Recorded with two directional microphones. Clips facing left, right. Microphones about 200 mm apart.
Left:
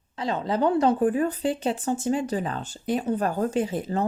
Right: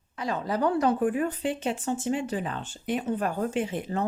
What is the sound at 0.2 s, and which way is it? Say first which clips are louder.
A woman's voice: left 3 dB; 25° left (ahead or behind).